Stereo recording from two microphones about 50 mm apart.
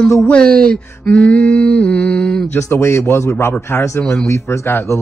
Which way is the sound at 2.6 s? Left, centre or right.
Left.